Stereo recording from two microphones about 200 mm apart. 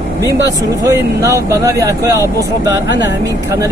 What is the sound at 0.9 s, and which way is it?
Speech, 15° right (ahead or behind).